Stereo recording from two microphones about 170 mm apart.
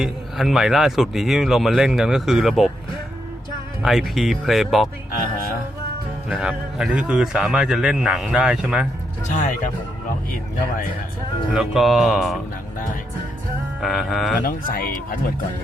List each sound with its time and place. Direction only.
0.0 s speech: centre (ahead or behind)
3.8 s speech: centre (ahead or behind)
6.2 s speech: 5° right (ahead or behind)
9.3 s speech: 50° left (ahead or behind)
11.5 s speech: centre (ahead or behind)
13.8 s speech: centre (ahead or behind)
14.4 s speech: 55° left (ahead or behind)